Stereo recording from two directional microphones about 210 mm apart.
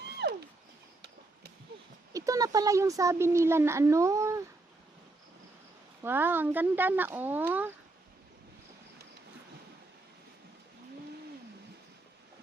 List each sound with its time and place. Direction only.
0.2 s wild animals: 50° right (ahead or behind)
2.1 s speech: 15° right (ahead or behind)
6.0 s speech: 10° right (ahead or behind)